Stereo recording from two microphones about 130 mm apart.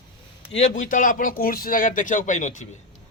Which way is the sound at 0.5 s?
70° left (ahead or behind).